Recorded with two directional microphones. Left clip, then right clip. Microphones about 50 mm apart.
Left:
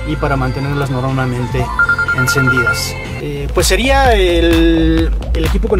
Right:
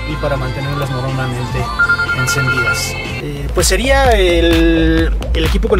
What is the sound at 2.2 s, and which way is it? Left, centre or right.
Speech, left.